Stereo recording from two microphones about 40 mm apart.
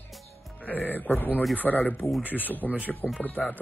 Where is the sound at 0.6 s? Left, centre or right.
Left.